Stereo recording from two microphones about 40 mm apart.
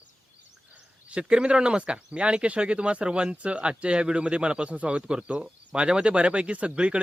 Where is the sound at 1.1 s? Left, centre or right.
Right.